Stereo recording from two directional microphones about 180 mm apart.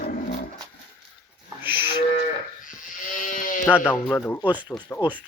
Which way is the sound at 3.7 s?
10° left (ahead or behind).